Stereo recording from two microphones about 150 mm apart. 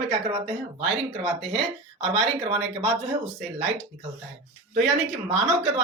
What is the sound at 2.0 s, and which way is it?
Speech, 40° right (ahead or behind).